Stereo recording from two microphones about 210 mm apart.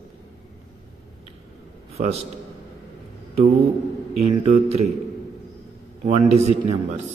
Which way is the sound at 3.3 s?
30° right (ahead or behind).